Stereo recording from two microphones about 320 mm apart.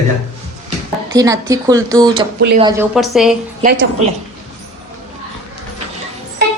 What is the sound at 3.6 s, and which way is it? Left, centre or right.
Speech, right.